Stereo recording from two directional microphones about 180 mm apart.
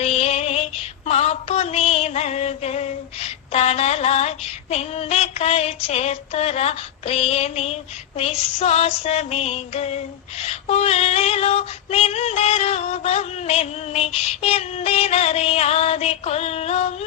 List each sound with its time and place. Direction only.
0.0 s synthetic singing: 35° left (ahead or behind)
1.0 s a sound: 35° left (ahead or behind)
3.5 s female singing: 35° left (ahead or behind)